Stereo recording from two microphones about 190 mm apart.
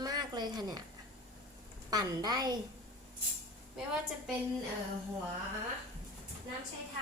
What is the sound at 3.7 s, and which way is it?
Speech, 5° right (ahead or behind).